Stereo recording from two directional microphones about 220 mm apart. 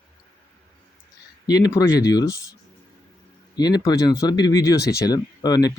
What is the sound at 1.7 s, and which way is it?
Speech, 15° left (ahead or behind).